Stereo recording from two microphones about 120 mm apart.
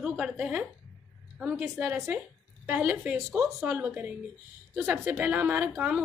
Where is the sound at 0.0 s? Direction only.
5° right (ahead or behind).